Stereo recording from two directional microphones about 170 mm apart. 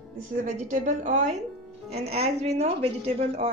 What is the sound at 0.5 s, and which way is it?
A woman's voice, 45° right (ahead or behind).